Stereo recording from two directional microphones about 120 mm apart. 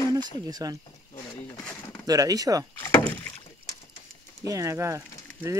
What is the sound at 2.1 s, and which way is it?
Speech, 30° right (ahead or behind).